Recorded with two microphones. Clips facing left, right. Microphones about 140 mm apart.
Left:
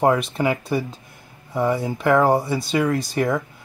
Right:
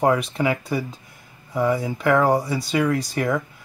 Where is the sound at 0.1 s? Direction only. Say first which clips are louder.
Left 1 dB; centre (ahead or behind).